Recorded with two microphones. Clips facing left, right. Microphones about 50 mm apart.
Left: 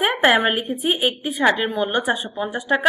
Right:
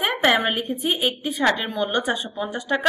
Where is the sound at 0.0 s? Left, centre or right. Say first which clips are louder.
Left 3 dB; centre.